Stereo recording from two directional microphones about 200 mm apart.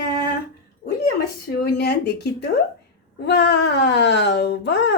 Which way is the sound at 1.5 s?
55° left (ahead or behind).